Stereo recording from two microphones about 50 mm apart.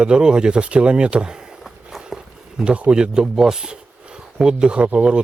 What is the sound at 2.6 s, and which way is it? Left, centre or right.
Speech, right.